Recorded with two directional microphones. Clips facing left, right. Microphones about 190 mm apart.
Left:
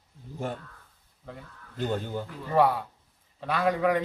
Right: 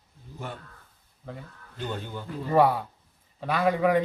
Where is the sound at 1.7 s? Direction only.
40° left (ahead or behind).